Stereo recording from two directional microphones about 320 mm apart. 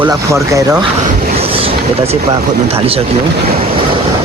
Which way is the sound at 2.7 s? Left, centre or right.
Centre.